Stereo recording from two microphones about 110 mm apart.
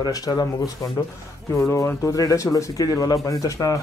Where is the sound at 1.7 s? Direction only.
25° left (ahead or behind).